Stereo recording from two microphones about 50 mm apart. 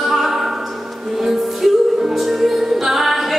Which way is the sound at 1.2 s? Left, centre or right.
Centre.